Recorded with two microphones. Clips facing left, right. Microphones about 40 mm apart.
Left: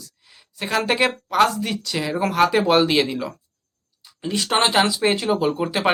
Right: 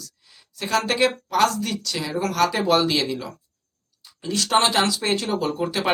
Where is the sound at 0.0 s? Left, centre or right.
Left.